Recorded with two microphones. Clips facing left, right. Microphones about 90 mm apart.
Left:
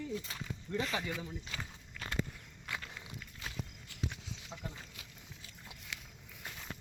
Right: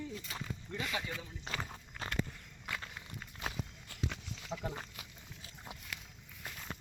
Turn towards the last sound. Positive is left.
turn(degrees=-60)  # may be behind; listen again after turning